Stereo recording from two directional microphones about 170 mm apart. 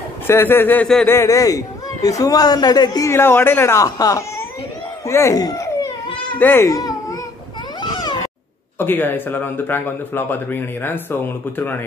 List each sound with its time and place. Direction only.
0.3 s a man's voice: 15° left (ahead or behind)
1.1 s speech: 20° left (ahead or behind)
5.0 s baby cry: 15° left (ahead or behind)
6.3 s a child's voice: 10° left (ahead or behind)
7.8 s cat: 25° left (ahead or behind)
8.7 s a man's voice: 10° left (ahead or behind)